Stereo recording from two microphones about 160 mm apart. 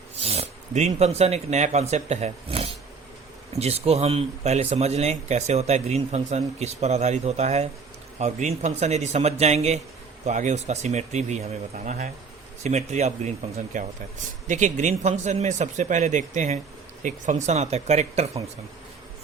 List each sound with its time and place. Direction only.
0.2 s speech: 40° right (ahead or behind)